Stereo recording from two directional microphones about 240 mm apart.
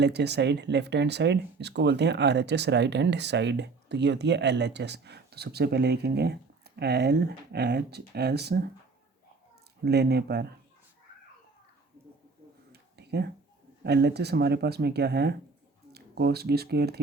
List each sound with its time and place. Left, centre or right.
0.0 s speech: right
9.8 s speech: right
12.7 s a sound: right
13.8 s speech: right